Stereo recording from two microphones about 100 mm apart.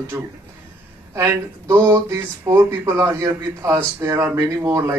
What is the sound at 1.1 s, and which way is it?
Speech, 30° right (ahead or behind).